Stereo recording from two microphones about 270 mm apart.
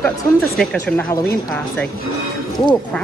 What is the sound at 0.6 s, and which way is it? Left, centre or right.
Speech, centre.